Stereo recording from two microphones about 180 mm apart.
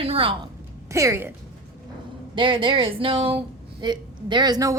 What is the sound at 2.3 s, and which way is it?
A woman's voice, 25° right (ahead or behind).